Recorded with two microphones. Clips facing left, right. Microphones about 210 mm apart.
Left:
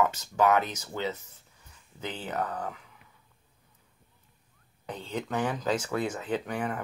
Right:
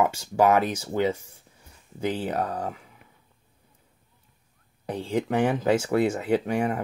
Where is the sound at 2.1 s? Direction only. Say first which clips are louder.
Right 5 dB; 30° right (ahead or behind).